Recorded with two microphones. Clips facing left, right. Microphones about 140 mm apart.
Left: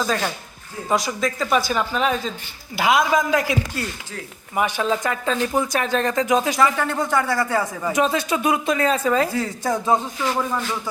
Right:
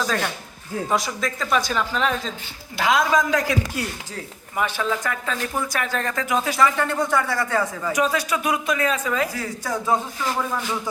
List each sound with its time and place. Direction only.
0.0 s a man's voice: centre (ahead or behind); by 6.6 s 20° left (ahead or behind)
6.6 s speech: 5° left (ahead or behind)
7.8 s speech: 25° left (ahead or behind)